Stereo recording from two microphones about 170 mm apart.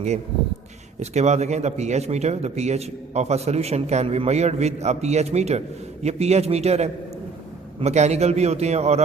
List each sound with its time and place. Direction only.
0.9 s a man's voice: 40° right (ahead or behind)